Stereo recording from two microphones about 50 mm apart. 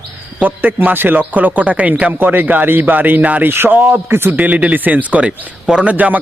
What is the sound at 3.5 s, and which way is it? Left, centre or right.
Speech, right.